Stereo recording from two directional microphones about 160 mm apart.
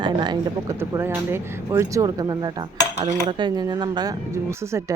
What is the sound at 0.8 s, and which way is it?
Speech, 15° right (ahead or behind).